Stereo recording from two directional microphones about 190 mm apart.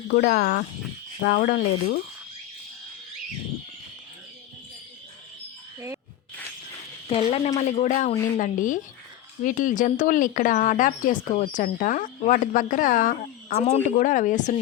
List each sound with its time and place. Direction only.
0.1 s speech: 55° left (ahead or behind)
7.1 s a woman's voice: 30° left (ahead or behind)